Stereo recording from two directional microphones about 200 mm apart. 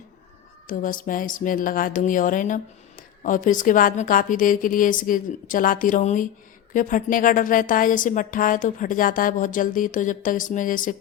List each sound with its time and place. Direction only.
0.7 s a woman's voice: 45° left (ahead or behind)